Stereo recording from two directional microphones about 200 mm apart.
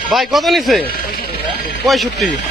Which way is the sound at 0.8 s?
50° left (ahead or behind).